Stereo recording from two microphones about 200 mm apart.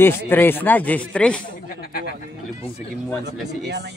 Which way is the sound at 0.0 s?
10° left (ahead or behind).